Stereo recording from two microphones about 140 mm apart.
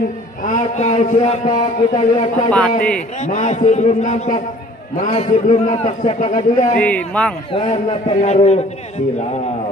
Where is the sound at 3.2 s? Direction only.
55° left (ahead or behind).